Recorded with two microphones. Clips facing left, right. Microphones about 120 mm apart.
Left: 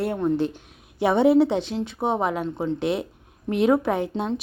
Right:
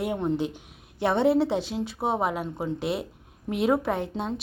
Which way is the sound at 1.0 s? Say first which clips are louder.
Left 4 dB; 5° left (ahead or behind).